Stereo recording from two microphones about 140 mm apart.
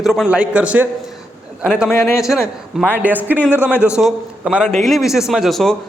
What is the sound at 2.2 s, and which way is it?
A man's voice, 5° right (ahead or behind).